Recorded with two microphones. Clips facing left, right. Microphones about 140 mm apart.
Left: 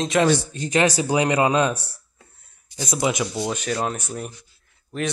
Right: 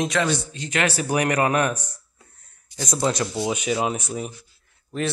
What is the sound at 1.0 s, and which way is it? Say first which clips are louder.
Speech: left 2 dB; 25° left (ahead or behind).